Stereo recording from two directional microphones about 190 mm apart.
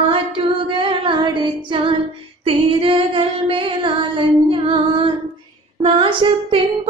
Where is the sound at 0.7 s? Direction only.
25° right (ahead or behind).